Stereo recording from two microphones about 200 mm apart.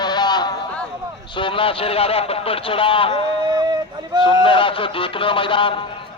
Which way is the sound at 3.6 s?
20° right (ahead or behind).